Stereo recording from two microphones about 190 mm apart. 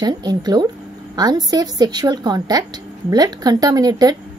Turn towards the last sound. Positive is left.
turn(degrees=-20)  # may be behind; listen again after turning